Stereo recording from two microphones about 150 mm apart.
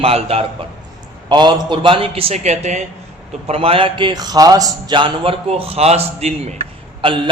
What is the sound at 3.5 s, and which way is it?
A man's voice, 40° right (ahead or behind).